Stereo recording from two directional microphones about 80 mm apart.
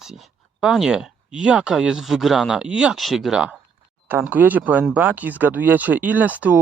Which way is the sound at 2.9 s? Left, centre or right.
Centre.